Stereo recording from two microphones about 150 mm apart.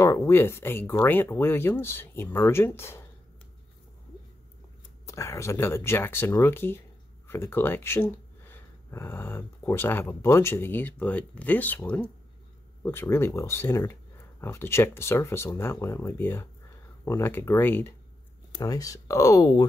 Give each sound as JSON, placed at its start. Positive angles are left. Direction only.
{"t": 0.0, "sound": "speech", "side_deg": 20}
{"t": 5.0, "sound": "speech", "side_deg": 20}